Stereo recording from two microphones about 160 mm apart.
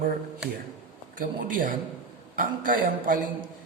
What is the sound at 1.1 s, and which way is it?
A man's voice, 60° right (ahead or behind).